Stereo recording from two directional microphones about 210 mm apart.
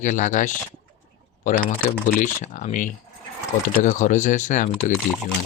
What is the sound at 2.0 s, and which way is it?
Speech, 35° left (ahead or behind).